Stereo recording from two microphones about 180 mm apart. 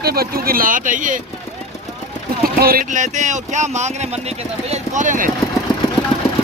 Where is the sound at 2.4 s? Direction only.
55° right (ahead or behind).